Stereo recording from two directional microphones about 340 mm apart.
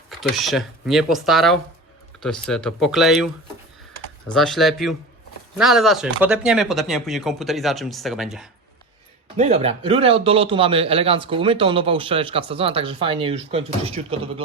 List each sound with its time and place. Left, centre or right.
0.1 s speech: centre
4.3 s speech: centre
9.4 s speech: centre